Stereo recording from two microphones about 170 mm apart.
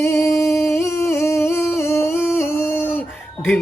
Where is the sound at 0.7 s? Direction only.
15° left (ahead or behind).